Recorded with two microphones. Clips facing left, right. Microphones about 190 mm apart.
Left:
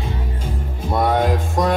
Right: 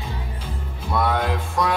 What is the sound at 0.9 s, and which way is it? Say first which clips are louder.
Music: left 4 dB; 45° left (ahead or behind).